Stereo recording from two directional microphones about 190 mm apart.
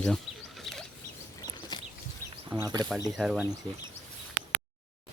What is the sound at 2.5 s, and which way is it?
Speech, 15° right (ahead or behind).